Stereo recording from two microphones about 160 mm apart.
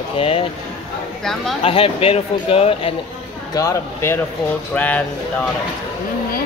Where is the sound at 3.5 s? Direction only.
20° left (ahead or behind).